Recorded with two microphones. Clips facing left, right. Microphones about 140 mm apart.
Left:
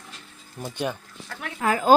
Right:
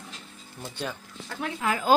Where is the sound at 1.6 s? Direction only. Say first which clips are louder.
Left 5 dB; 45° left (ahead or behind).